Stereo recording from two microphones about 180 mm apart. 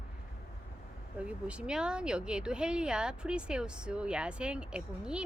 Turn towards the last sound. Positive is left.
turn(degrees=-5)  # may be behind; listen again after turning